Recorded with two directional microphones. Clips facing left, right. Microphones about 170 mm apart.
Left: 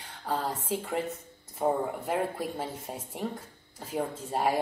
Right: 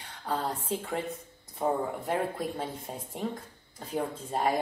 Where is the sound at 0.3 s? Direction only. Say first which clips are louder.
Even; centre (ahead or behind).